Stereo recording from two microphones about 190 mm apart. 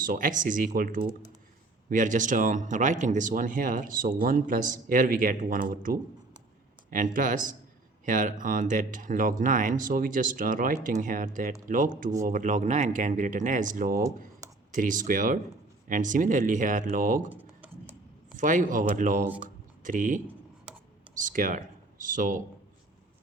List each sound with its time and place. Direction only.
0.0 s speech: 45° right (ahead or behind)
17.3 s computer keyboard: 10° right (ahead or behind)
18.3 s speech: 45° right (ahead or behind)
20.7 s a sound: 5° right (ahead or behind)
21.2 s speech: 45° right (ahead or behind)